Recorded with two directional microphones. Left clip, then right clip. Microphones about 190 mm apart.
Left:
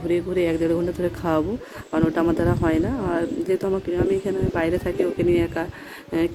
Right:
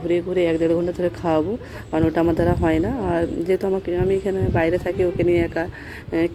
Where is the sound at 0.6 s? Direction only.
40° left (ahead or behind).